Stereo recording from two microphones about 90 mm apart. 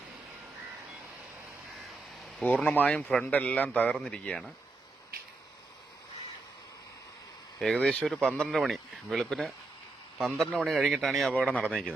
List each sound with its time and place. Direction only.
2.4 s speech: 15° left (ahead or behind)
7.6 s speech: 5° left (ahead or behind)
11.3 s speech: 15° left (ahead or behind)